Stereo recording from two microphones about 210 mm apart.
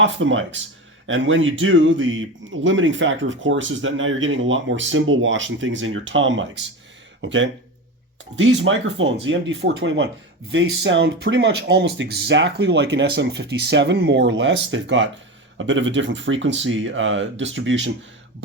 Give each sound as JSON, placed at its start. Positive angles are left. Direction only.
{"t": 0.0, "sound": "speech", "side_deg": -65}